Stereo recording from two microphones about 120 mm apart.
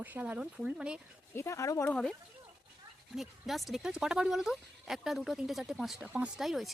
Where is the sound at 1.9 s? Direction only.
5° left (ahead or behind).